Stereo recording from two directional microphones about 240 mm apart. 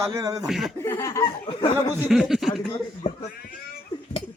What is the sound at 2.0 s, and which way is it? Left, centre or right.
Speech, centre.